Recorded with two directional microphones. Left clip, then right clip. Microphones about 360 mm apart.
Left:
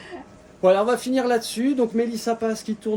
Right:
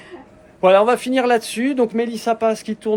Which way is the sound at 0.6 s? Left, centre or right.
Centre.